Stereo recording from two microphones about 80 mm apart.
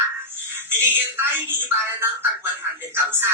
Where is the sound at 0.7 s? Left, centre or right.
Right.